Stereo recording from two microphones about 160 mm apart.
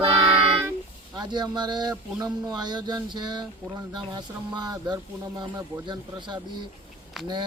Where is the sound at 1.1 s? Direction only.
25° right (ahead or behind).